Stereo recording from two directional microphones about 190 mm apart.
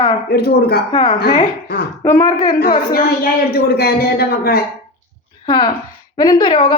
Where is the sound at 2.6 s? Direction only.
50° left (ahead or behind).